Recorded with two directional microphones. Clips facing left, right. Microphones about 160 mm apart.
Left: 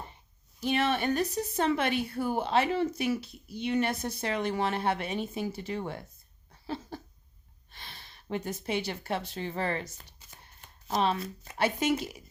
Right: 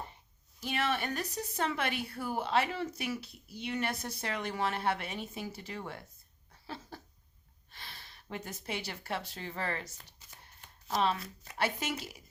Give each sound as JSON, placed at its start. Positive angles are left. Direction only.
{"t": 0.6, "sound": "a woman's voice", "side_deg": 25}
{"t": 6.7, "sound": "a sound", "side_deg": 25}
{"t": 7.7, "sound": "a woman's voice", "side_deg": 20}